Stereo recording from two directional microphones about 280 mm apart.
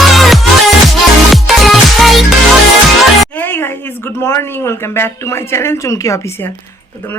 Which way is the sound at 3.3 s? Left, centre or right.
Centre.